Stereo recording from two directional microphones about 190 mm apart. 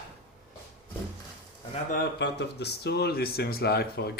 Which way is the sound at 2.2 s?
65° left (ahead or behind).